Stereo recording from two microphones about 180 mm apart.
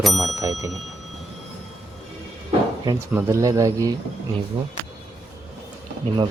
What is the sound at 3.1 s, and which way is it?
Speech, 15° right (ahead or behind).